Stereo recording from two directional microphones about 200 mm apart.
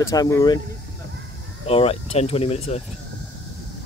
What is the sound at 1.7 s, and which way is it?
Speech, 30° left (ahead or behind).